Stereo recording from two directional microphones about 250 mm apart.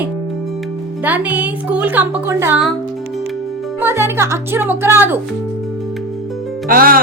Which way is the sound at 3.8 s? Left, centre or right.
Centre.